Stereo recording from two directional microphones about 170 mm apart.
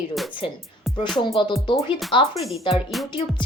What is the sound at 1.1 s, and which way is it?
Speech, 30° left (ahead or behind).